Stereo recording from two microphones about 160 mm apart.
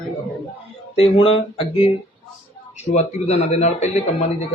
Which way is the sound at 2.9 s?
45° left (ahead or behind).